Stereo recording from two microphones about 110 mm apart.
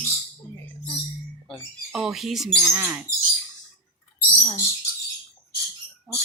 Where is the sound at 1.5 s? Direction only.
5° right (ahead or behind).